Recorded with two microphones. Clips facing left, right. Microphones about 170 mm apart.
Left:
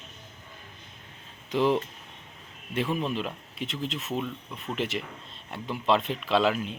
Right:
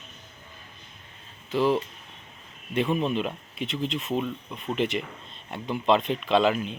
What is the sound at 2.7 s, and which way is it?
Speech, centre (ahead or behind).